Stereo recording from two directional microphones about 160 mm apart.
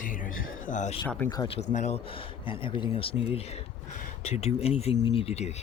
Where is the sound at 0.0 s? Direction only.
55° left (ahead or behind).